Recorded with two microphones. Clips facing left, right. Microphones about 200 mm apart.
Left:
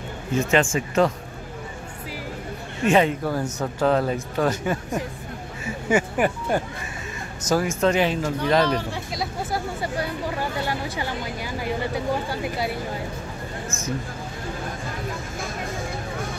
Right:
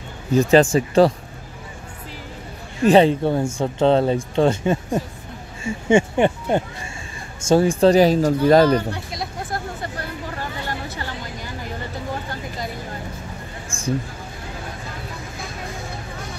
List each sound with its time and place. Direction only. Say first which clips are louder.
0.3 s speech: right 7 dB; 35° right (ahead or behind)
2.8 s speech: right 6 dB; 35° right (ahead or behind)
8.6 s speech: right 6 dB; centre (ahead or behind)
12.3 s speech: left 3 dB; 10° left (ahead or behind)
13.7 s vehicle: left 1 dB; 30° right (ahead or behind)